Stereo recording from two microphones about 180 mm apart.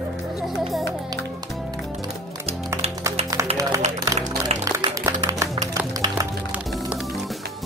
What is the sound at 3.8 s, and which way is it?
Music, 40° right (ahead or behind).